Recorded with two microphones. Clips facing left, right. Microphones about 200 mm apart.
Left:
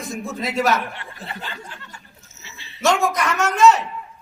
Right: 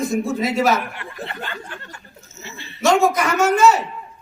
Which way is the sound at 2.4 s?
55° right (ahead or behind).